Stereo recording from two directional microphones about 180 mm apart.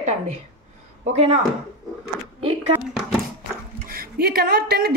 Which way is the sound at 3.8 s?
55° right (ahead or behind).